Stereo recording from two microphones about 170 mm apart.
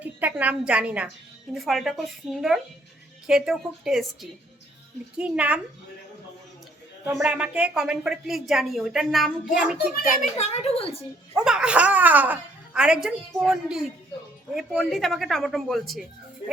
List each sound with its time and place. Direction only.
0.0 s a woman's voice: 10° right (ahead or behind)
7.2 s speech: 5° right (ahead or behind)
9.9 s a child's voice: 60° left (ahead or behind)
10.3 s a woman's voice: 40° left (ahead or behind)
11.3 s speech: 5° right (ahead or behind)